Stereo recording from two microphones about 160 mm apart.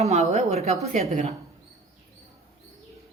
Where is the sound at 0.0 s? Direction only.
45° right (ahead or behind).